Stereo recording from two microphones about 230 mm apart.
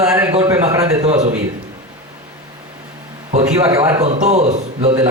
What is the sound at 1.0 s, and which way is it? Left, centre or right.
Speech, right.